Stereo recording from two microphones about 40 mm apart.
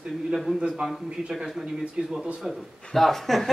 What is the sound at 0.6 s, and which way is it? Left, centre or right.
Speech, right.